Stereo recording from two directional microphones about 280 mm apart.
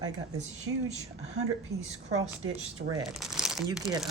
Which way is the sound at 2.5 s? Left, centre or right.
Centre.